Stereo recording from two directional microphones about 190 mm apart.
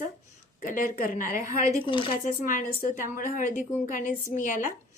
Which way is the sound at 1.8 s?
25° left (ahead or behind).